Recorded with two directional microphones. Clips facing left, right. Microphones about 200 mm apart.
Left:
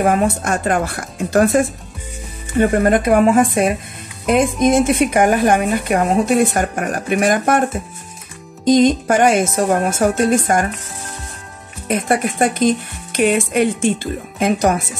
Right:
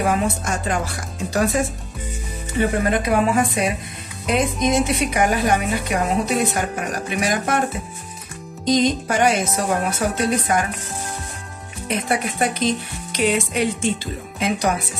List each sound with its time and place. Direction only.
0.0 s a woman's voice: 55° left (ahead or behind)
11.9 s a woman's voice: 50° left (ahead or behind)